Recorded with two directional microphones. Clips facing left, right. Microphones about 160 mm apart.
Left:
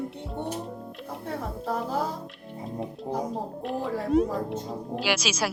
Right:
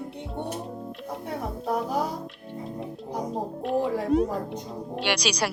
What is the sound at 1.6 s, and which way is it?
Music, 15° right (ahead or behind).